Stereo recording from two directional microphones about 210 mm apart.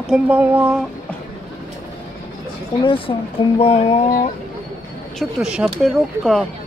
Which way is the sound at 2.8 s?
25° left (ahead or behind).